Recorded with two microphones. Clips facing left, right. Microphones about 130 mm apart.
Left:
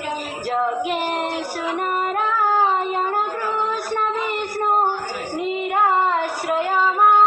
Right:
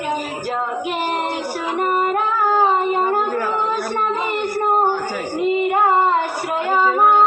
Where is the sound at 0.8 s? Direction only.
20° right (ahead or behind).